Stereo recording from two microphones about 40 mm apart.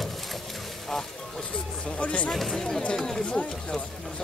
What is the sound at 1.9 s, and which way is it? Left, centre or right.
Speech, left.